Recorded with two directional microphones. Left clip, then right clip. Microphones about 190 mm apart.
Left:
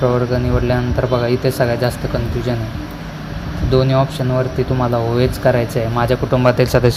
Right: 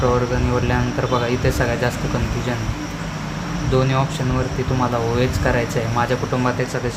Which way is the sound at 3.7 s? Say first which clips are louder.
Left 5 dB; 25° left (ahead or behind).